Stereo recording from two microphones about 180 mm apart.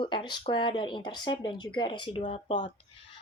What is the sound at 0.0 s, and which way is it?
Speech, 25° left (ahead or behind).